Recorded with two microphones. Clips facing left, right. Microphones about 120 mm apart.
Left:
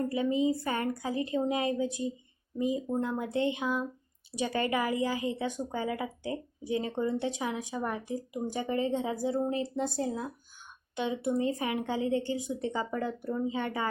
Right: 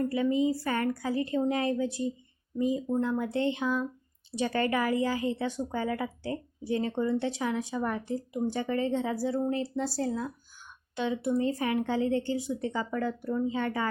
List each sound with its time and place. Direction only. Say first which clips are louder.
0.0 s a woman's voice: right 2 dB; 20° left (ahead or behind)